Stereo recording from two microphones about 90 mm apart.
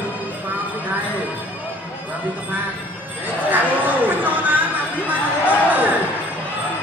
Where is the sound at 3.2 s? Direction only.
20° right (ahead or behind).